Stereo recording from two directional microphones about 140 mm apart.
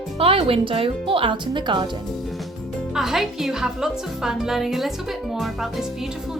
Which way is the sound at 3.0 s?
Centre (ahead or behind).